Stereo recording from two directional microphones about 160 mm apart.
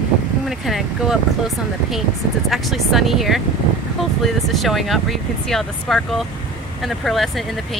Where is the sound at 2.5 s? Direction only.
Centre (ahead or behind).